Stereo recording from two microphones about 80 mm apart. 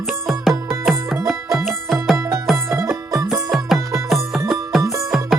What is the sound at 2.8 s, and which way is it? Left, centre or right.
Music, right.